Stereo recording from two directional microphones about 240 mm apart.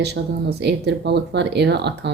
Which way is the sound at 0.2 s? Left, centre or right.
Right.